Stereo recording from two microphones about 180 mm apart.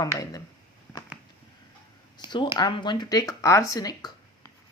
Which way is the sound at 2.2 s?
15° right (ahead or behind).